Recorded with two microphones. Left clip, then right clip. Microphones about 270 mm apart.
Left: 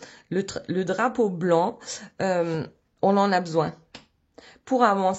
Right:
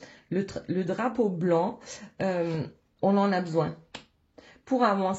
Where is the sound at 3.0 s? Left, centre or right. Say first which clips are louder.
Left 4 dB; left.